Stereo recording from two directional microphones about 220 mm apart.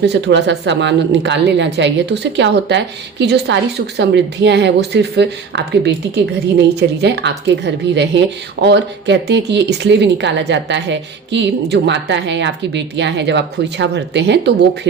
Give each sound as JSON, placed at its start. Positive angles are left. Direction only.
{"t": 0.0, "sound": "speech", "side_deg": -50}